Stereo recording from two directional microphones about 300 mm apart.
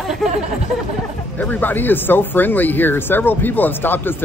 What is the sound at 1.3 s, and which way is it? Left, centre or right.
Speech, centre.